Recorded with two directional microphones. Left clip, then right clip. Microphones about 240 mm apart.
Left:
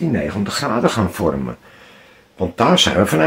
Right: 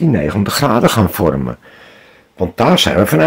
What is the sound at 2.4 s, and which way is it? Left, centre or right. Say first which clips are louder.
Speech: right 2 dB; right.